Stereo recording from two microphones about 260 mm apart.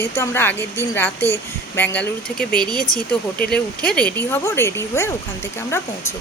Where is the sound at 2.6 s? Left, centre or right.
Centre.